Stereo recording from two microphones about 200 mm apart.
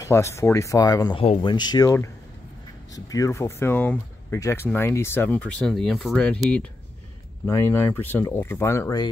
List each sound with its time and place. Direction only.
0.0 s speech: 15° left (ahead or behind)